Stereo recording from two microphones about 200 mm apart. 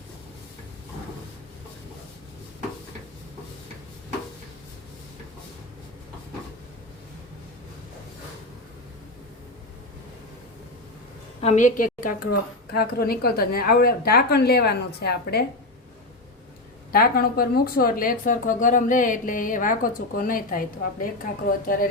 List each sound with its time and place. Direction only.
11.3 s speech: 35° left (ahead or behind); by 15.4 s 55° left (ahead or behind)
16.9 s speech: 50° left (ahead or behind)